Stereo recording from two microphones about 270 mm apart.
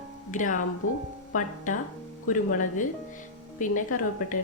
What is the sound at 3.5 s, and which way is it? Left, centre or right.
Speech, left.